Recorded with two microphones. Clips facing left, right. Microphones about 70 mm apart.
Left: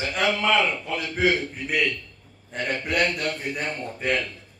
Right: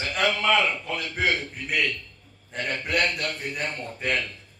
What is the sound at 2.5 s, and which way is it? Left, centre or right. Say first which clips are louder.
Speech: left 2 dB; left.